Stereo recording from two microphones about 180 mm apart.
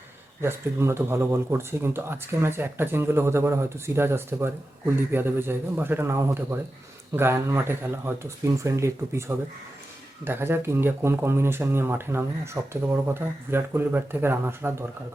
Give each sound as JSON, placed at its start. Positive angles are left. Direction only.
{"t": 0.4, "sound": "speech", "side_deg": -15}